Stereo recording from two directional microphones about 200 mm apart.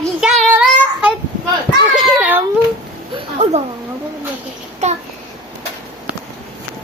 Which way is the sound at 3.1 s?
30° right (ahead or behind).